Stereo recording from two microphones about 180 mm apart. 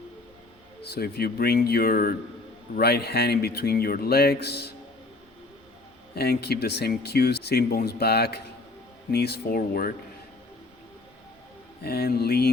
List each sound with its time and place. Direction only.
0.8 s speech: 60° left (ahead or behind)
6.1 s speech: 60° left (ahead or behind)
11.8 s speech: 60° left (ahead or behind)